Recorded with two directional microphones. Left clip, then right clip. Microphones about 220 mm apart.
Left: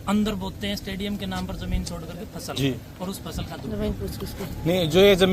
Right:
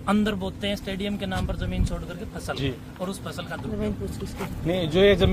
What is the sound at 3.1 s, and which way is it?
Speech, 5° right (ahead or behind).